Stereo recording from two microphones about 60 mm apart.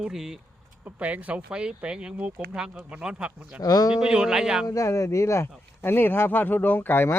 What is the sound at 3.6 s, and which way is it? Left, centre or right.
Speech, left.